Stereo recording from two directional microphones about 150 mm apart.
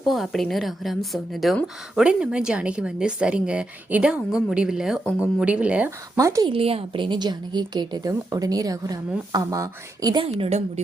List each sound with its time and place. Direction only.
0.0 s a woman's voice: centre (ahead or behind)
6.1 s a woman's voice: 20° right (ahead or behind)
6.5 s a woman's voice: 40° right (ahead or behind)
10.2 s a woman's voice: 40° right (ahead or behind)